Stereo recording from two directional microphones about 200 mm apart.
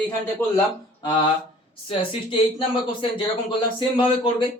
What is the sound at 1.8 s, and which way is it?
Speech, 25° left (ahead or behind).